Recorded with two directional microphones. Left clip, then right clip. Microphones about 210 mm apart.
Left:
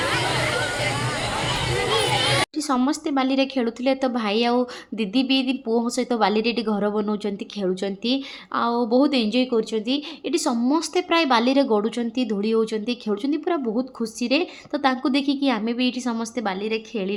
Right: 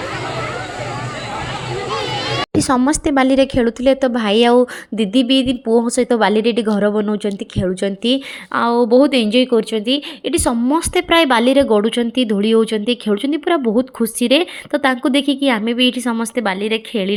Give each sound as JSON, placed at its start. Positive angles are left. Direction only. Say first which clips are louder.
{"t": 2.6, "sound": "a woman's voice", "louder": "right 7 dB", "side_deg": -30}